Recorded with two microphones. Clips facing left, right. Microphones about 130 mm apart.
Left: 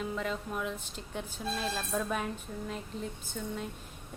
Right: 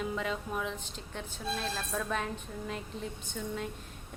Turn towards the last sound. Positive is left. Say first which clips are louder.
# right 1 dB
turn(degrees=0)  # may be behind; listen again after turning